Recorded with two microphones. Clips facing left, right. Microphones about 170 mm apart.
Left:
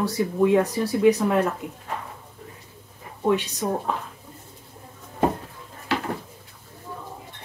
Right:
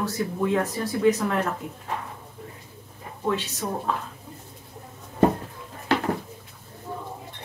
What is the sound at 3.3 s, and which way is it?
Speech, 15° left (ahead or behind).